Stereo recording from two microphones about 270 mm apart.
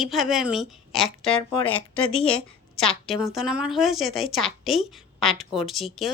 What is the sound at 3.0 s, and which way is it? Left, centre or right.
A woman's voice, centre.